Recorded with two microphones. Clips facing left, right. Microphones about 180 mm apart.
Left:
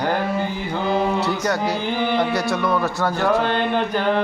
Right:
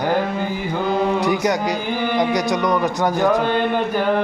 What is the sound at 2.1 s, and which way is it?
Speech, 15° right (ahead or behind).